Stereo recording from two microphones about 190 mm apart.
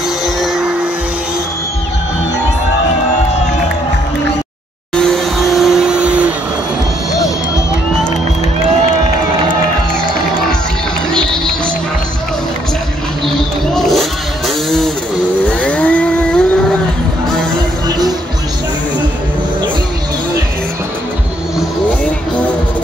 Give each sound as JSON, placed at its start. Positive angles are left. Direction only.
{"t": 0.4, "sound": "music", "side_deg": -5}
{"t": 4.9, "sound": "vehicle", "side_deg": 5}
{"t": 13.7, "sound": "a sound", "side_deg": 0}
{"t": 15.6, "sound": "vehicle", "side_deg": 5}
{"t": 17.8, "sound": "music", "side_deg": -20}